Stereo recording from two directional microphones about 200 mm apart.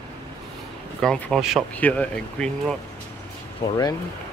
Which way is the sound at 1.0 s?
5° left (ahead or behind).